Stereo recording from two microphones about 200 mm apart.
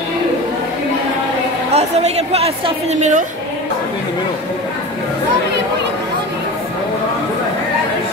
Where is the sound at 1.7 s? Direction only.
30° right (ahead or behind).